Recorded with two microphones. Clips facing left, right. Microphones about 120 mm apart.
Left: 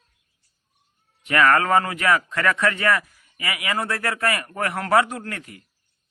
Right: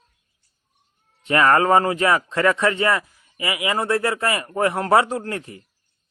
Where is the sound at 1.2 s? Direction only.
30° right (ahead or behind).